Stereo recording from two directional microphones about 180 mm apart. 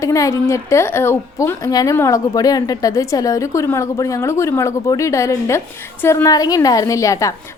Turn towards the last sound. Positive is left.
turn(degrees=20)  # may be behind; listen again after turning